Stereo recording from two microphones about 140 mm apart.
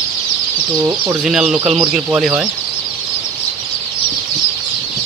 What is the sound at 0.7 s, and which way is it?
Speech, 25° right (ahead or behind).